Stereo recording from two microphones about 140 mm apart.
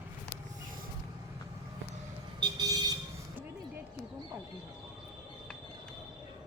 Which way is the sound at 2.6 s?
30° right (ahead or behind).